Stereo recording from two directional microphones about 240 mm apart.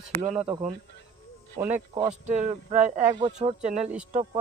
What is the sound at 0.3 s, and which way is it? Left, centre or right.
Speech, right.